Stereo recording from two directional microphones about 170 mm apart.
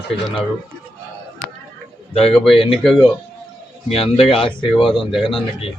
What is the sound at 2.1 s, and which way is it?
Speech, 35° left (ahead or behind).